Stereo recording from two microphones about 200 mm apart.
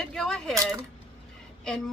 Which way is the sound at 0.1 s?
5° left (ahead or behind).